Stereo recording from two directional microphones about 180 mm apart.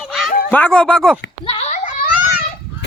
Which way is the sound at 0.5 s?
5° left (ahead or behind).